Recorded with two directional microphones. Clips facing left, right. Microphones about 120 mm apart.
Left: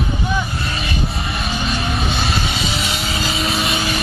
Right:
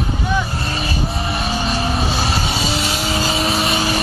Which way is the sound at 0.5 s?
35° right (ahead or behind).